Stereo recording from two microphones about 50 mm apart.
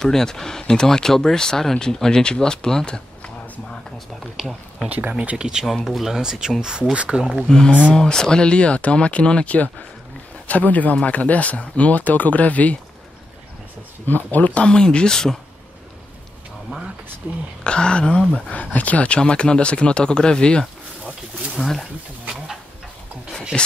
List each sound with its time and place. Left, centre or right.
0.0 s speech: centre
4.4 s speech: centre
4.8 s speech: right
5.9 s speech: centre
6.9 s speech: right
7.4 s speech: centre
14.0 s speech: left
14.7 s speech: centre
17.6 s speech: centre
21.6 s speech: centre
23.5 s speech: centre